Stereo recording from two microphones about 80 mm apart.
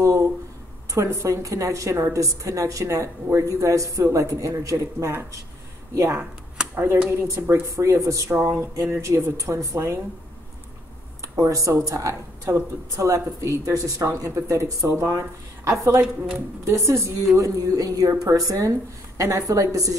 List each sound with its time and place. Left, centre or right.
0.0 s a sound: right
0.9 s a woman's voice: right
6.7 s speech: right
11.3 s speech: right
17.4 s a woman's voice: right